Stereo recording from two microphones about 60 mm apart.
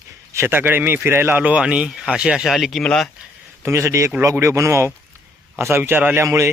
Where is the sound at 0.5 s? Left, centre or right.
Right.